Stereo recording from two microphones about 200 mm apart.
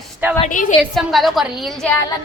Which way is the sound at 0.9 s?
Centre (ahead or behind).